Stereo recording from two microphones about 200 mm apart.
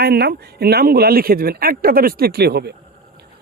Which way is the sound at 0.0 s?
55° right (ahead or behind).